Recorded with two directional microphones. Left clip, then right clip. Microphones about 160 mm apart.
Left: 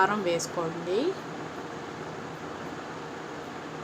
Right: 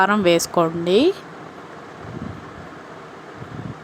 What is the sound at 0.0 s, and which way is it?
A woman's voice, 65° right (ahead or behind).